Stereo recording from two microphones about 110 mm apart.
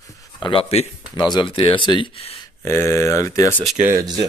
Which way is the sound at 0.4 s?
50° left (ahead or behind).